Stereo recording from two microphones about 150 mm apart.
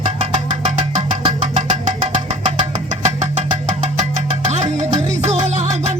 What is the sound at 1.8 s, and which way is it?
Engine, 45° right (ahead or behind).